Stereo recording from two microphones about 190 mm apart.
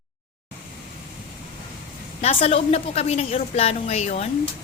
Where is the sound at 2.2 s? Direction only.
30° left (ahead or behind).